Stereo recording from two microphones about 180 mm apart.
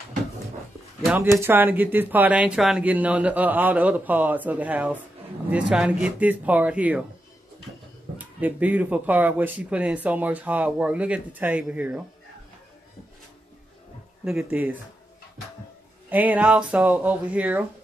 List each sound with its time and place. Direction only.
1.1 s speech: 15° right (ahead or behind)
8.2 s speech: 10° right (ahead or behind)
14.2 s speech: 5° right (ahead or behind)
16.1 s speech: 10° right (ahead or behind)